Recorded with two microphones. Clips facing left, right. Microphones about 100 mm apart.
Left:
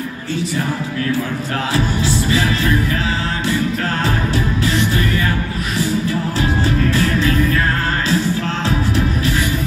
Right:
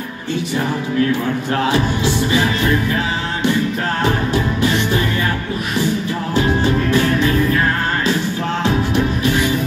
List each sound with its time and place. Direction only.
1.7 s music: 20° right (ahead or behind)
4.3 s music: 20° right (ahead or behind)